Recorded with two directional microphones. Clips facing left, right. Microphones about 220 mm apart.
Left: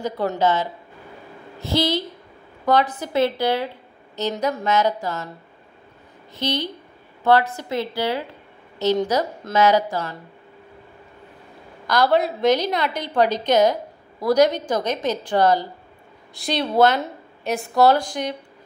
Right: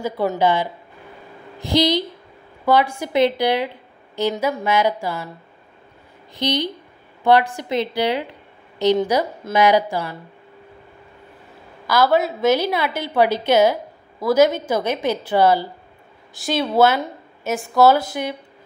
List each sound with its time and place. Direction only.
0.0 s a woman's voice: 10° right (ahead or behind)
6.3 s a woman's voice: 15° right (ahead or behind)
11.9 s a woman's voice: 5° right (ahead or behind)